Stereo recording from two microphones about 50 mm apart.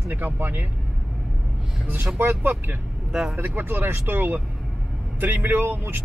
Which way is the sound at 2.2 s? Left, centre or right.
Right.